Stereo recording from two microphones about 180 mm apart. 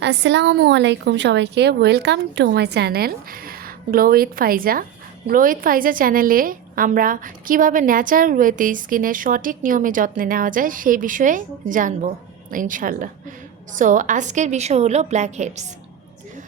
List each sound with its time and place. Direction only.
0.0 s a woman's voice: 75° right (ahead or behind); by 15.6 s 40° right (ahead or behind)